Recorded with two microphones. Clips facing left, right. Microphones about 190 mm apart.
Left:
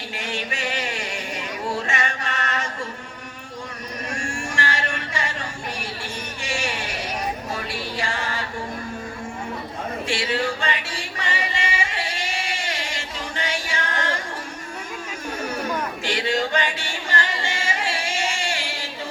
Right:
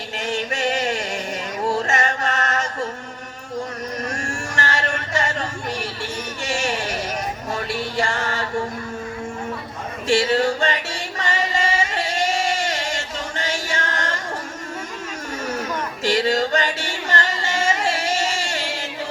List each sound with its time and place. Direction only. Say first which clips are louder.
0.2 s music: right 6 dB; 45° right (ahead or behind)
1.9 s chant: right 5 dB; 45° right (ahead or behind)
4.1 s a sound: right 1 dB; 45° right (ahead or behind)
6.4 s music: right 4 dB; 45° right (ahead or behind)
10.1 s music: right 8 dB; 45° right (ahead or behind)
16.0 s a sound: right 6 dB; 40° right (ahead or behind)